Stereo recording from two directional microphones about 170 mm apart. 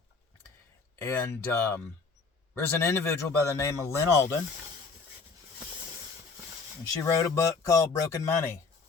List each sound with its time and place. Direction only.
1.0 s speech: 15° left (ahead or behind)
7.0 s speech: 15° left (ahead or behind)